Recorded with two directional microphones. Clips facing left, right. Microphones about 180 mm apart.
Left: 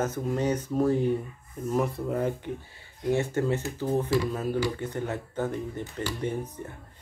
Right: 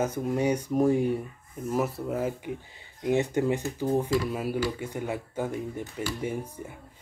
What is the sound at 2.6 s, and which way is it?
Speech, 15° right (ahead or behind).